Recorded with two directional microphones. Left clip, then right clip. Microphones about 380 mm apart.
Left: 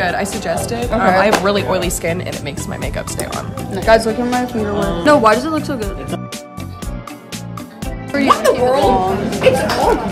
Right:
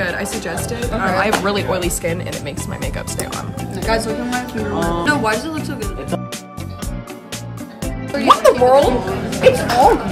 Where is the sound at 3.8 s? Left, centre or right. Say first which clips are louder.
Left 7 dB; centre.